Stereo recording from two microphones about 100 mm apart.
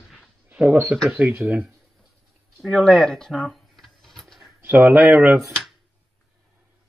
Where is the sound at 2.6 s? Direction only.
5° left (ahead or behind).